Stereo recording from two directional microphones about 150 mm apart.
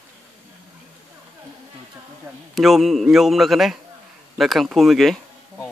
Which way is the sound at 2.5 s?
Centre (ahead or behind).